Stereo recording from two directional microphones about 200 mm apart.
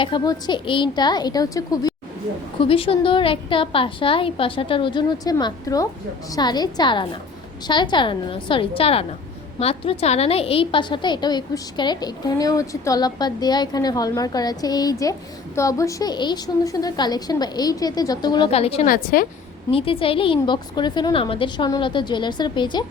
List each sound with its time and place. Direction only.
0.0 s a woman's voice: 20° left (ahead or behind)
18.9 s a woman's voice: 45° left (ahead or behind)
19.7 s a woman's voice: 25° left (ahead or behind)